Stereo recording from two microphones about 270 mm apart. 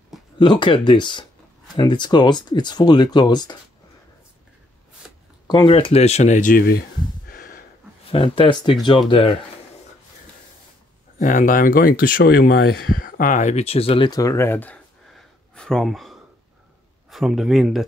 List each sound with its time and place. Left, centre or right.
0.4 s speech: centre
5.5 s speech: centre
7.2 s a sound: left
8.1 s speech: centre
11.1 s speech: left; by 17.8 s centre